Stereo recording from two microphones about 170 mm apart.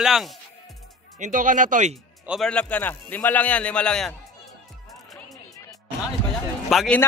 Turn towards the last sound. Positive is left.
turn(degrees=0)  # may be behind; listen again after turning